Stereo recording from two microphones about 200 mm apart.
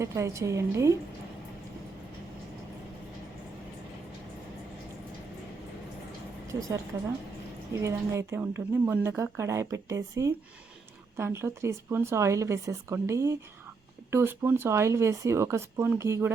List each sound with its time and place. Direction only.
0.0 s speech: 15° right (ahead or behind)
6.5 s a woman's voice: 15° right (ahead or behind)
7.8 s speech: 15° right (ahead or behind)